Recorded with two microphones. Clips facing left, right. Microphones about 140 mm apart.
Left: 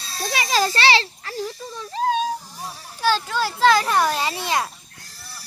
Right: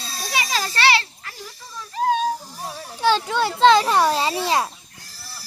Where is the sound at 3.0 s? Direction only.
20° right (ahead or behind).